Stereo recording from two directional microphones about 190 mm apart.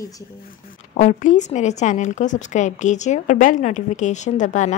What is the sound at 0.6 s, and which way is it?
Speech, 40° left (ahead or behind).